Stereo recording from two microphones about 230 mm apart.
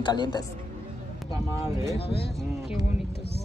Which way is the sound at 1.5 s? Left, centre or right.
Centre.